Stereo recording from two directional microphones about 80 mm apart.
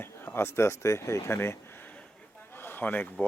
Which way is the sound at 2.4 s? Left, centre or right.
Left.